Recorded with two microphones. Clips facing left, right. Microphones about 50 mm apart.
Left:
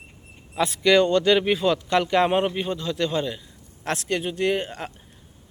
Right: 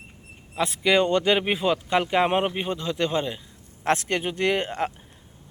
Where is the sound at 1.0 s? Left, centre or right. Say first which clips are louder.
Left 2 dB; right.